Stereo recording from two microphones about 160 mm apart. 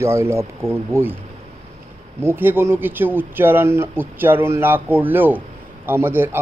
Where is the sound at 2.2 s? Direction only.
15° right (ahead or behind).